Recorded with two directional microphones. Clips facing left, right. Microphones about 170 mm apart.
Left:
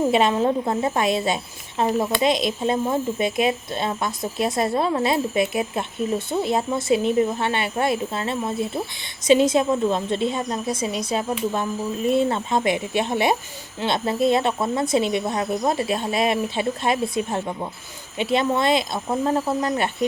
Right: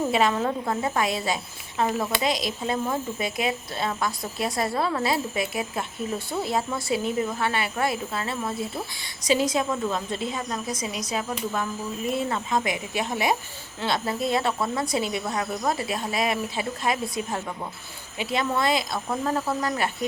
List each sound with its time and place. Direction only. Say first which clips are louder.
0.1 s speech: left 4 dB; 25° left (ahead or behind)